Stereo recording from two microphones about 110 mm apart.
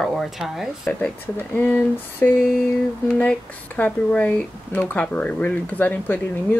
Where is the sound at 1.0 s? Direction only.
15° left (ahead or behind).